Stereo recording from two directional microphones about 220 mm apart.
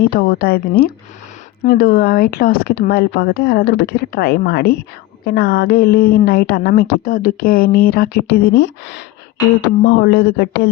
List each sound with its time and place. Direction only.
0.0 s speech: 45° left (ahead or behind)